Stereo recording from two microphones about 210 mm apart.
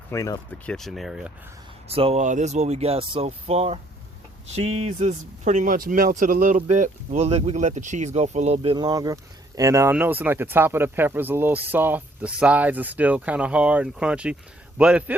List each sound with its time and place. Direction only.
0.1 s speech: 15° left (ahead or behind)
0.7 s speech: centre (ahead or behind)
1.9 s speech: 30° right (ahead or behind); by 15.1 s 5° right (ahead or behind)